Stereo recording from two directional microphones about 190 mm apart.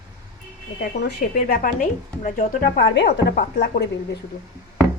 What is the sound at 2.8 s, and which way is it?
A woman's voice, 60° left (ahead or behind).